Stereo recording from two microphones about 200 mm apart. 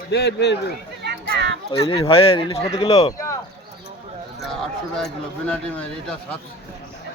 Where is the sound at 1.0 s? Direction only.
55° right (ahead or behind).